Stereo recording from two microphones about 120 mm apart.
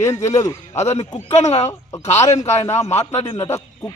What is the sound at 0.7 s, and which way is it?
A man's voice, 65° left (ahead or behind).